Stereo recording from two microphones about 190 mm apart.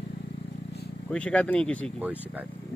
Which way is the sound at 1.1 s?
5° left (ahead or behind).